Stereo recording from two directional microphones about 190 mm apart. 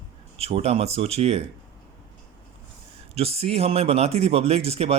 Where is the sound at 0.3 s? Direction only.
30° right (ahead or behind).